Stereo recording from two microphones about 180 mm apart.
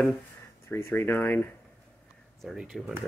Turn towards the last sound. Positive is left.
turn(degrees=0)  # may be behind; listen again after turning